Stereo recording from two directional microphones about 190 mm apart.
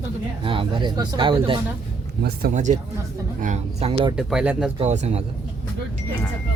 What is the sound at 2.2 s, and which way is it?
Speech, 55° right (ahead or behind).